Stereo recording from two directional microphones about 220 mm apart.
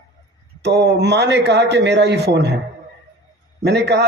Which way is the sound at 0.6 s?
50° right (ahead or behind).